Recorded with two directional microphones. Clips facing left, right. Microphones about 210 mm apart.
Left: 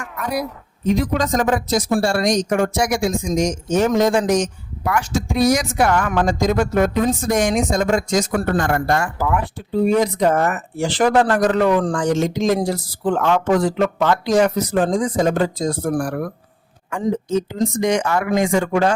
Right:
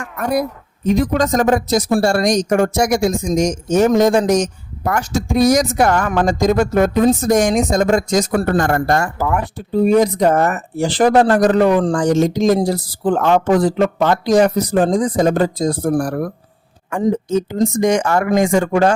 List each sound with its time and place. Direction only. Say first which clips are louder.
0.2 s speech: right 5 dB; 50° right (ahead or behind)